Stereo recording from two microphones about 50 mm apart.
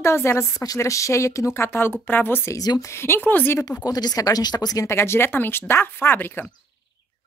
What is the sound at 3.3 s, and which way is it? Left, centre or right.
Speech, left.